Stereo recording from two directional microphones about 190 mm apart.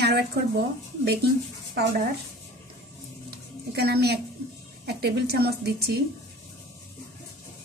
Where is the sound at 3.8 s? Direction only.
60° right (ahead or behind).